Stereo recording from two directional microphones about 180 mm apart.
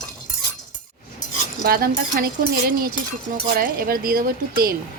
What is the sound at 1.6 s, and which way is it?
Speech, 55° right (ahead or behind).